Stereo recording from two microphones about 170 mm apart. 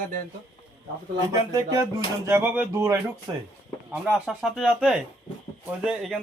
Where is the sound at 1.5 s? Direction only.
20° right (ahead or behind).